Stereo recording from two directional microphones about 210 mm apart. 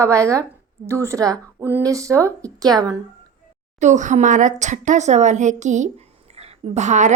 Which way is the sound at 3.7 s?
35° right (ahead or behind).